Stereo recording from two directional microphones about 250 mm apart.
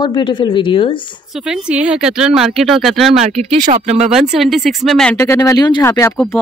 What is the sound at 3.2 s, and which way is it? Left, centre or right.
Speech, right.